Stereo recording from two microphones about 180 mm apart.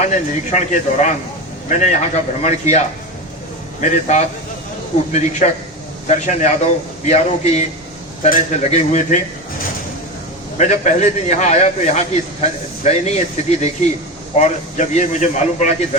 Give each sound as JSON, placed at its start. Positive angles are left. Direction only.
{"t": 0.0, "sound": "speech", "side_deg": 40}
{"t": 10.6, "sound": "speech", "side_deg": 40}